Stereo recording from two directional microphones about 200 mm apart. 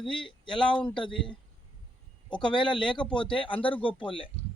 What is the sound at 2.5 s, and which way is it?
Speech, 25° left (ahead or behind).